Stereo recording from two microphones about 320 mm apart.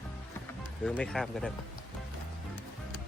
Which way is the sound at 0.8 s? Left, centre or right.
Centre.